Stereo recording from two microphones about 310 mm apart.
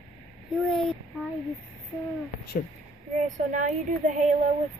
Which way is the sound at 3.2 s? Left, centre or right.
Right.